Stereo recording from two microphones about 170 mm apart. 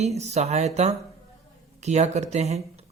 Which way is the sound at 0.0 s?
40° right (ahead or behind).